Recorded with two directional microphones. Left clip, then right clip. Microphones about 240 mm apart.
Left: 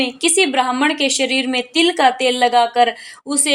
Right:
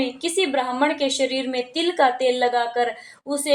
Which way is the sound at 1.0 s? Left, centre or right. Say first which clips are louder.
Left 4 dB; left.